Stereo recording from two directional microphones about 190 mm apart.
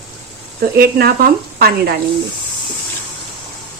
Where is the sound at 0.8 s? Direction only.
55° right (ahead or behind).